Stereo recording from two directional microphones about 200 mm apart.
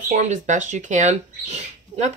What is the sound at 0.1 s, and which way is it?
Speech, 35° right (ahead or behind).